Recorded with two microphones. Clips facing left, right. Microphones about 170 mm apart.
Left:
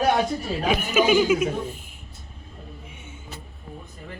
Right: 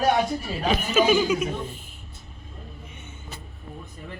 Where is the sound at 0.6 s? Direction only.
10° left (ahead or behind).